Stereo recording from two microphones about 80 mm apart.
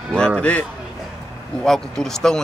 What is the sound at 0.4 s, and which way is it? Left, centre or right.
Speech, centre.